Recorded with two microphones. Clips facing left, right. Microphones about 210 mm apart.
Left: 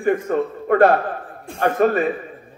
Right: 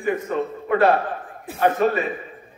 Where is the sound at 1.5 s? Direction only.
5° right (ahead or behind).